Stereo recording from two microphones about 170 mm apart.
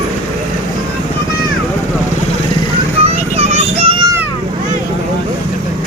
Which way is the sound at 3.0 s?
40° right (ahead or behind).